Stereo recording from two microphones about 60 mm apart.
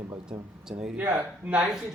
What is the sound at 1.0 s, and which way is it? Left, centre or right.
Speech, right.